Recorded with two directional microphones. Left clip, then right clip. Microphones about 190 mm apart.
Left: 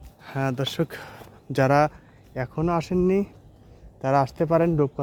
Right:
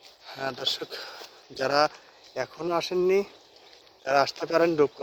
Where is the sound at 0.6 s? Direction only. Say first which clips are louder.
Left 2 dB; 25° left (ahead or behind).